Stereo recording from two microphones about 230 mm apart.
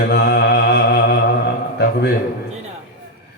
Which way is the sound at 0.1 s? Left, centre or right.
Left.